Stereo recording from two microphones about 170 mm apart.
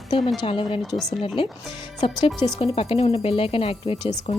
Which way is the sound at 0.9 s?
Centre (ahead or behind).